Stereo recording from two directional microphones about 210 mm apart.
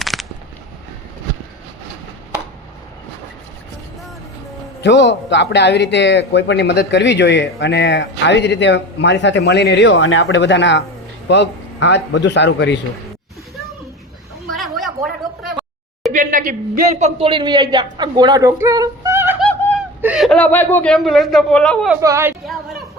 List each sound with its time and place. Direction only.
0.0 s a sound: centre (ahead or behind)
4.8 s speech: 55° left (ahead or behind)
14.4 s a sound: centre (ahead or behind)
16.1 s a man's voice: 40° right (ahead or behind)
17.2 s a woman's voice: 25° right (ahead or behind); by 21.9 s 5° left (ahead or behind)
22.0 s speech: 10° right (ahead or behind)